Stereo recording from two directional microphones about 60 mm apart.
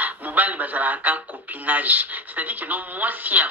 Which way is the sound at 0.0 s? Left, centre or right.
Right.